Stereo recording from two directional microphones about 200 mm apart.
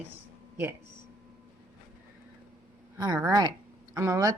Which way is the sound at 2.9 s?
20° right (ahead or behind).